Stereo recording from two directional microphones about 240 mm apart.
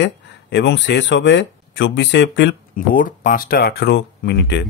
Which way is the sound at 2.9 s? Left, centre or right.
Left.